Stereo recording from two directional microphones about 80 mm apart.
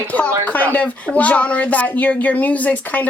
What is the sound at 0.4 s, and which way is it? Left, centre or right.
Speech, left.